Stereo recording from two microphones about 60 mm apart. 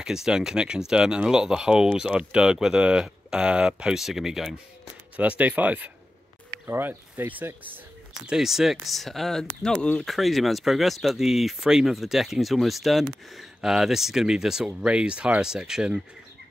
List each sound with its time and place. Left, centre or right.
0.0 s speech: centre
5.1 s speech: right
8.3 s speech: centre